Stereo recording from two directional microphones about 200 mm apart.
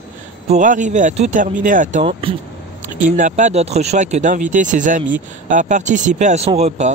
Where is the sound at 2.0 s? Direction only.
25° right (ahead or behind).